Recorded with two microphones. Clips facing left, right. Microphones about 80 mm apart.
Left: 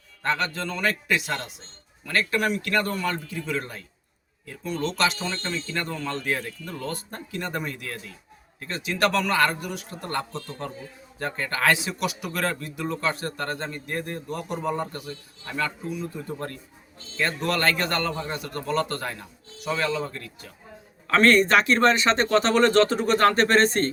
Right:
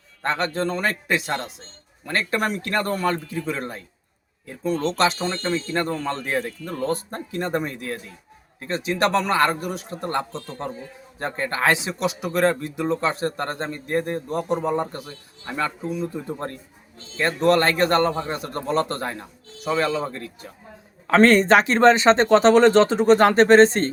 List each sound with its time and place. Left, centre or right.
0.2 s speech: right